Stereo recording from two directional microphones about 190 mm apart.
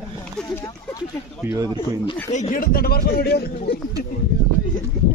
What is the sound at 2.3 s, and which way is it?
A man's voice, 40° left (ahead or behind).